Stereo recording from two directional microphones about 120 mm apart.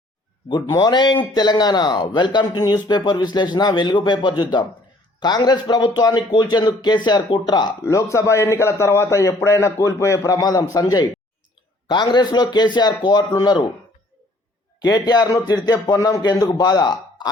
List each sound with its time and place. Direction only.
0.8 s speech: 40° left (ahead or behind)
14.8 s speech: 35° left (ahead or behind)